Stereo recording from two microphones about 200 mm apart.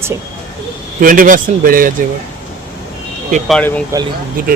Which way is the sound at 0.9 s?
45° right (ahead or behind).